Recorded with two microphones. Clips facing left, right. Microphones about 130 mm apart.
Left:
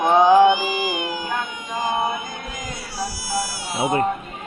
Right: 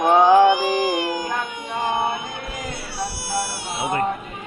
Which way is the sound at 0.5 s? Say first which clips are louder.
Right 4 dB; 70° right (ahead or behind).